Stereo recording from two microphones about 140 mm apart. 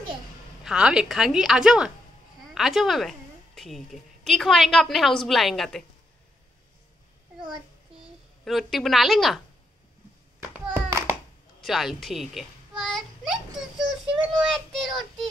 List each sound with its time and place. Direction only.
0.7 s a woman's voice: 5° right (ahead or behind)
8.5 s a woman's voice: centre (ahead or behind)
10.7 s a sound: 20° right (ahead or behind)
11.6 s a sound: centre (ahead or behind)
14.0 s child singing: 35° right (ahead or behind)
14.4 s speech: centre (ahead or behind)